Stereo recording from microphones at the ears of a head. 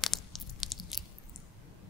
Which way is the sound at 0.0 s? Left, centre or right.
Left.